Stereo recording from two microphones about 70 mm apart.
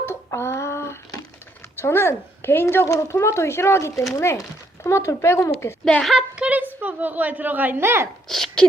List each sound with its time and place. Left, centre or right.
0.0 s a sound: left
1.8 s speech: left
6.0 s speech: centre
6.3 s a sound: centre
6.8 s speech: right
8.3 s speech: centre